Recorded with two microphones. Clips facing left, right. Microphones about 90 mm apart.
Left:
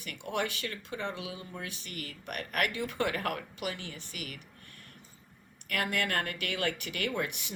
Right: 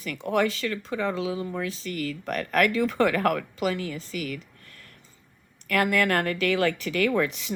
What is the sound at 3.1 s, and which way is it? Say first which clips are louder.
Speech: right 10 dB; 90° right.